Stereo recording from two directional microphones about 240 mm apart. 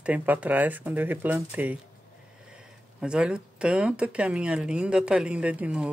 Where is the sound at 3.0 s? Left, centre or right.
Centre.